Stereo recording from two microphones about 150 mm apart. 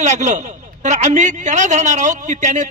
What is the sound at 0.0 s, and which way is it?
A man's voice, 55° right (ahead or behind).